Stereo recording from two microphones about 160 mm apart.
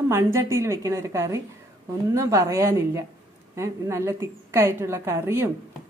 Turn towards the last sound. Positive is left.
turn(degrees=-15)  # may be behind; listen again after turning